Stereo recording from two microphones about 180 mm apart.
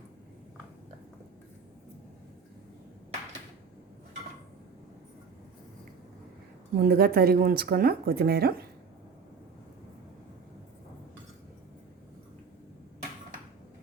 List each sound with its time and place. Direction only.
6.7 s speech: 55° right (ahead or behind)